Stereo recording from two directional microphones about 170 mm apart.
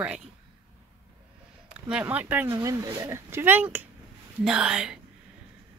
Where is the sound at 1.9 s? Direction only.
10° right (ahead or behind).